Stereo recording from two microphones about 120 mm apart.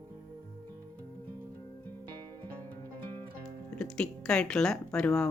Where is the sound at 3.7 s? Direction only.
5° left (ahead or behind).